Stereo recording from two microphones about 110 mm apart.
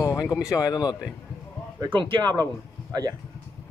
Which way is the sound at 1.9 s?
50° right (ahead or behind).